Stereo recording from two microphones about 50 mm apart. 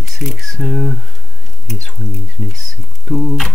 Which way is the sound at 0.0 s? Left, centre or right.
Centre.